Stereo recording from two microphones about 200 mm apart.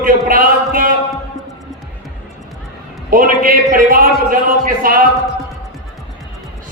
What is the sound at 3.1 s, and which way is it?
A man's voice, 45° right (ahead or behind).